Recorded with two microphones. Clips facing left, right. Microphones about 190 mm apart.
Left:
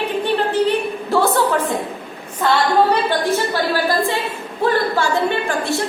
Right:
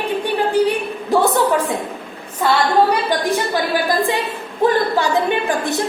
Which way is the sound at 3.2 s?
15° right (ahead or behind).